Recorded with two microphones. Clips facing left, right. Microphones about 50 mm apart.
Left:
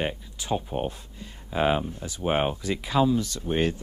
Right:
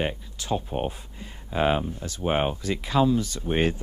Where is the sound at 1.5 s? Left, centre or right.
Centre.